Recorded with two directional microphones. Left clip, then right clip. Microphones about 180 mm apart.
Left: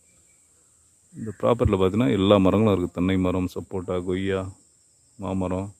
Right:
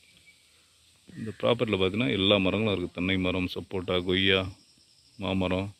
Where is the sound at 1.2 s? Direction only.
25° left (ahead or behind).